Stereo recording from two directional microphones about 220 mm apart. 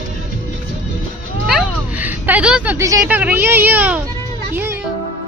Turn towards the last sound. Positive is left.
turn(degrees=-10)  # may be behind; listen again after turning